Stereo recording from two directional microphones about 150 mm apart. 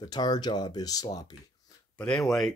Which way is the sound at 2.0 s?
5° left (ahead or behind).